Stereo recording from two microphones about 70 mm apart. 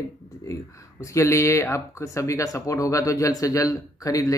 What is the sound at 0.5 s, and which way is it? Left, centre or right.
Speech, left.